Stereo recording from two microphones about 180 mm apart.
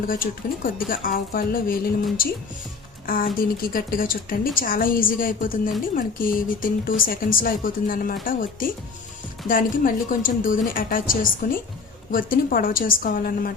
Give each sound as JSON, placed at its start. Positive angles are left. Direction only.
{"t": 0.1, "sound": "a woman's voice", "side_deg": 50}